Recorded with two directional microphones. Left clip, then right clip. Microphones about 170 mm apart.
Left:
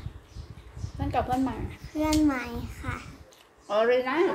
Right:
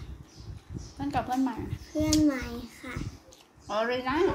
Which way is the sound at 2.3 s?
15° left (ahead or behind).